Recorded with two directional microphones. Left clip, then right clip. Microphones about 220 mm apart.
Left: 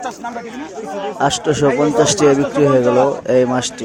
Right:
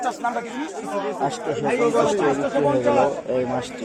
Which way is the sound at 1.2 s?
30° left (ahead or behind).